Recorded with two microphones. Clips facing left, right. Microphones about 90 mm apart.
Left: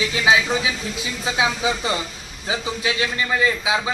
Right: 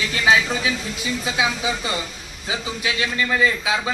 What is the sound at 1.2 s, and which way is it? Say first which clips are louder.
A man's voice: left 3 dB; 30° left (ahead or behind).